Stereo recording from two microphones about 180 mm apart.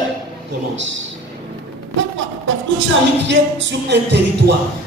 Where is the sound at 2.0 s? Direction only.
90° right.